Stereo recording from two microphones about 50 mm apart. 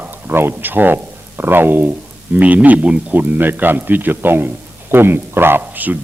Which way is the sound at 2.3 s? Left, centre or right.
Right.